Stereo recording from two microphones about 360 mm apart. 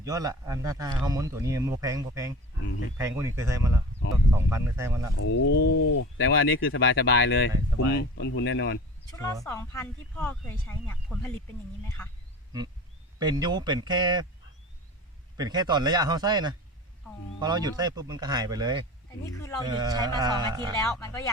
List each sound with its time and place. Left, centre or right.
0.0 s speech: centre
5.2 s a sound: left
6.1 s speech: left
9.4 s speech: centre
13.1 s speech: centre
15.4 s speech: centre
19.2 s speech: centre
19.6 s speech: centre
20.8 s speech: centre